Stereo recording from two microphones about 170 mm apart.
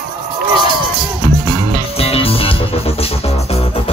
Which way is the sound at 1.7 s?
35° left (ahead or behind).